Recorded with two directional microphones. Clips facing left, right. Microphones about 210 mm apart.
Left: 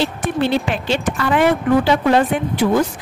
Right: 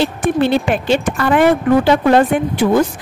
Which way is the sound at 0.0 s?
50° right (ahead or behind).